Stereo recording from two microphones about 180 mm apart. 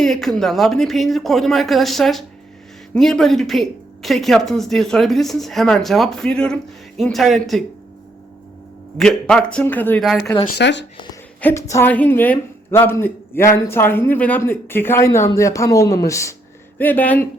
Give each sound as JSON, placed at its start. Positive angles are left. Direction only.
{"t": 0.0, "sound": "a woman's voice", "side_deg": 0}
{"t": 9.0, "sound": "a woman's voice", "side_deg": 5}
{"t": 10.0, "sound": "a woman's voice", "side_deg": 0}
{"t": 10.6, "sound": "speech", "side_deg": 75}
{"t": 10.9, "sound": "a woman's voice", "side_deg": 25}
{"t": 11.3, "sound": "a woman's voice", "side_deg": 10}